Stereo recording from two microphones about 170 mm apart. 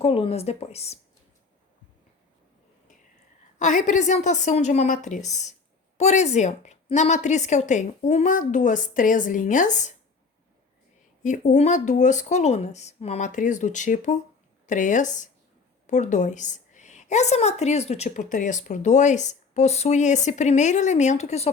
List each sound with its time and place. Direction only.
0.0 s speech: 35° left (ahead or behind)
3.6 s a woman's voice: 45° left (ahead or behind)
11.2 s a woman's voice: 45° left (ahead or behind)